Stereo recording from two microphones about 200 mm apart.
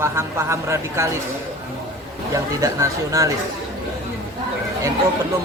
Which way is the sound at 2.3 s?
15° right (ahead or behind).